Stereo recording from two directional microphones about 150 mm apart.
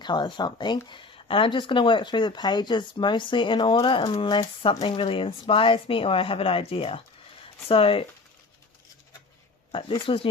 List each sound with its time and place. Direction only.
0.0 s speech: 30° left (ahead or behind)
9.7 s speech: 35° left (ahead or behind)